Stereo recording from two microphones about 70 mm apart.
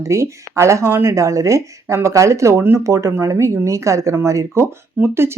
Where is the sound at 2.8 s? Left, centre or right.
Right.